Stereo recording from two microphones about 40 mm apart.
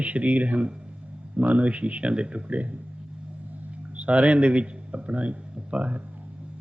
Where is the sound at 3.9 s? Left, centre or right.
Right.